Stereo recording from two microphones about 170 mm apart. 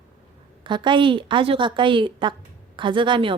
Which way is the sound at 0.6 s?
30° right (ahead or behind).